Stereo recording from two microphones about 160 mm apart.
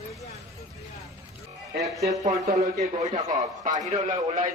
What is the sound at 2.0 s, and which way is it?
A man's voice, 45° right (ahead or behind).